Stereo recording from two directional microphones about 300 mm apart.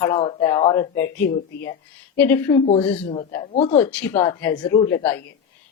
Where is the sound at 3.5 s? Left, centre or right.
Left.